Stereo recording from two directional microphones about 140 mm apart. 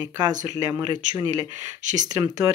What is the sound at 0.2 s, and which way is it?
Speech, 25° right (ahead or behind).